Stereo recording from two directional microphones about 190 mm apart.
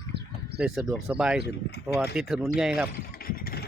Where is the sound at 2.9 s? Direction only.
50° left (ahead or behind).